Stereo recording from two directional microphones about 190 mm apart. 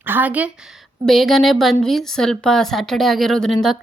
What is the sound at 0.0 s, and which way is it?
A woman's voice, 10° right (ahead or behind).